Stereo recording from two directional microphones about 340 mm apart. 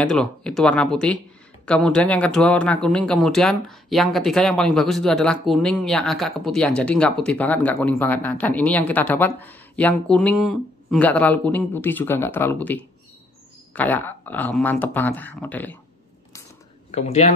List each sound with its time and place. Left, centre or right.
0.0 s speech: centre
16.9 s speech: centre